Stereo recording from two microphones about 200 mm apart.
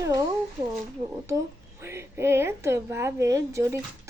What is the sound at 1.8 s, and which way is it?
A woman's voice, 10° right (ahead or behind).